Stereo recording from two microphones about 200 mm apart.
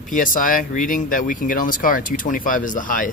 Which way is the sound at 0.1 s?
40° left (ahead or behind).